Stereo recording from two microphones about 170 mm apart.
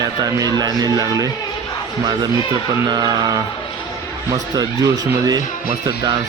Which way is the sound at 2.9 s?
25° right (ahead or behind).